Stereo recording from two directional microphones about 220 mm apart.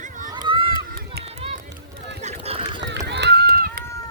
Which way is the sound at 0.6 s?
45° right (ahead or behind).